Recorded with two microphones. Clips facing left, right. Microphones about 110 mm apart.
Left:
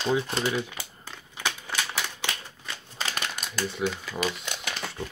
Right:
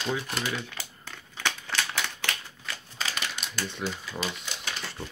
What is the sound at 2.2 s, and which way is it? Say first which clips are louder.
Typewriter: even; 20° left (ahead or behind).